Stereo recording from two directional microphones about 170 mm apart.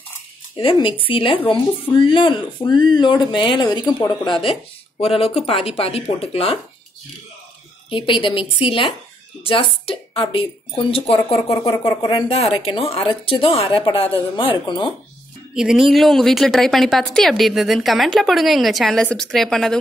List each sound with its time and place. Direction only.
0.6 s speech: 30° left (ahead or behind)
7.9 s speech: 30° left (ahead or behind)
11.5 s speech: 20° left (ahead or behind)
15.5 s a woman's voice: 5° right (ahead or behind)